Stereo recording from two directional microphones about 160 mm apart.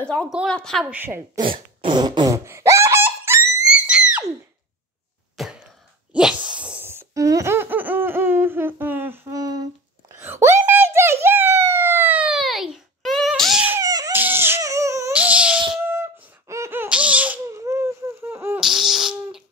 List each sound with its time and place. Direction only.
0.1 s a woman's voice: 10° left (ahead or behind)
0.8 s a woman's voice: 10° right (ahead or behind)
1.4 s fart: 30° right (ahead or behind); by 3.6 s 15° right (ahead or behind)
3.6 s screaming: 5° right (ahead or behind)
5.4 s throat clearing: centre (ahead or behind)
6.1 s laughter: 5° right (ahead or behind)
13.7 s dog: 20° right (ahead or behind)
15.8 s squeak: 15° right (ahead or behind)
18.6 s a sound: 5° right (ahead or behind)